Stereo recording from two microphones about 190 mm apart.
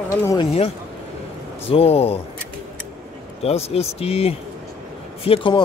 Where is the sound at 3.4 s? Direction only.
30° left (ahead or behind).